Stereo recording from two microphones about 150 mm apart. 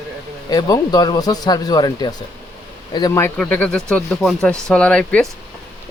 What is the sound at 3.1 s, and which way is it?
Speech, 15° left (ahead or behind).